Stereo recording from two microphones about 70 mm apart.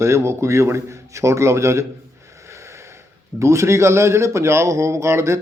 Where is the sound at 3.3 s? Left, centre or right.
Right.